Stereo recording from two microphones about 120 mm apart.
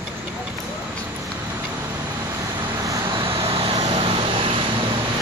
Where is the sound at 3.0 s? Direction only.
45° right (ahead or behind).